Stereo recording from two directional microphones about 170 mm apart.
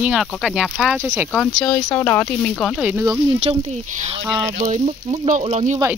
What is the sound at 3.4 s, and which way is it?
Speech, 40° right (ahead or behind).